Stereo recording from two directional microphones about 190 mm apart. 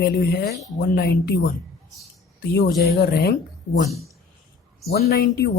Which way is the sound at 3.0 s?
55° left (ahead or behind).